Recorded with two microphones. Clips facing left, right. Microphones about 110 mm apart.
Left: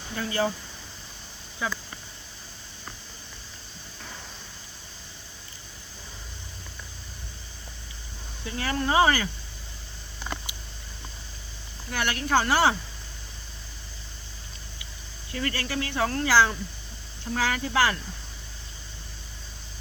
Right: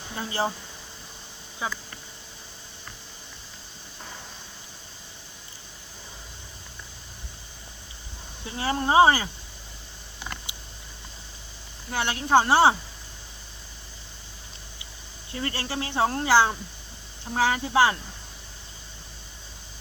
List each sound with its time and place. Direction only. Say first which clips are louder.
0.1 s speech: left 1 dB; 25° right (ahead or behind)
1.6 s speech: left 1 dB; 25° right (ahead or behind)
8.4 s speech: right 2 dB; 25° right (ahead or behind)
10.5 s a sound: even; 20° right (ahead or behind)
11.9 s speech: right 3 dB; 25° right (ahead or behind)
15.3 s speech: left 1 dB; 25° right (ahead or behind)